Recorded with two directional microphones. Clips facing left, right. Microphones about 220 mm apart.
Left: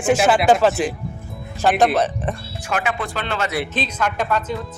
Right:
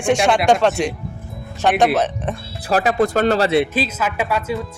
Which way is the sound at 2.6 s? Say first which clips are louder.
Right 7 dB; 35° right (ahead or behind).